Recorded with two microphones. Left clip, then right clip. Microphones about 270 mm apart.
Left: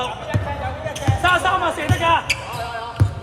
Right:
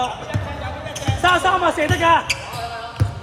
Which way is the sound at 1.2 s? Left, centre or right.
Right.